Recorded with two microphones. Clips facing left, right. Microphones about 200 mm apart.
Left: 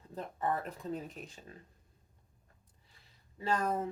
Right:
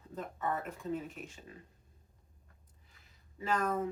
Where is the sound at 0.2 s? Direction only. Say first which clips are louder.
Left 2 dB; 35° left (ahead or behind).